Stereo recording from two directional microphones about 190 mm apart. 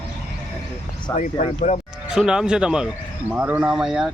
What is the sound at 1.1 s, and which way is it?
Speech, 40° left (ahead or behind).